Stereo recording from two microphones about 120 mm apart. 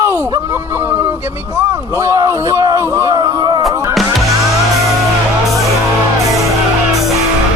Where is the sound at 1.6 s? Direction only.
25° right (ahead or behind).